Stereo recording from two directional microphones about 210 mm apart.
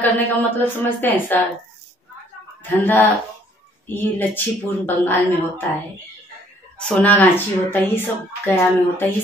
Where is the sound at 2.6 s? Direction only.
10° left (ahead or behind).